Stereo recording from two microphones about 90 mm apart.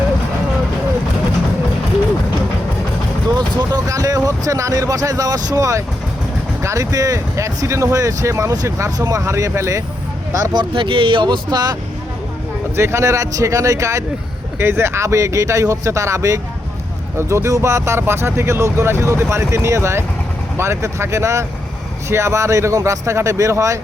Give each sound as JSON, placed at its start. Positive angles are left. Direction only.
{"t": 3.2, "sound": "vehicle", "side_deg": -50}
{"t": 6.6, "sound": "speech", "side_deg": -35}
{"t": 10.5, "sound": "speech", "side_deg": -65}
{"t": 12.7, "sound": "speech", "side_deg": -30}